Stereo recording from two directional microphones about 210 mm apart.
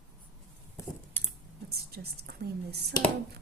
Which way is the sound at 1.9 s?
50° right (ahead or behind).